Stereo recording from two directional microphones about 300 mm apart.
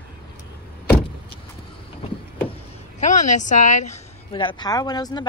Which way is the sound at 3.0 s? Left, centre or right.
Left.